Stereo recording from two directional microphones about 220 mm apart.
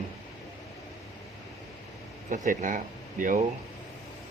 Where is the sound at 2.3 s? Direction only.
35° right (ahead or behind).